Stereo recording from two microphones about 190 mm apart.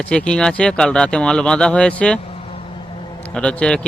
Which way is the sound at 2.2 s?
30° left (ahead or behind).